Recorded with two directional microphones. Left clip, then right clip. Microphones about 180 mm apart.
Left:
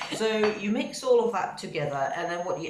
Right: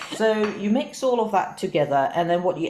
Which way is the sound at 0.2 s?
40° right (ahead or behind).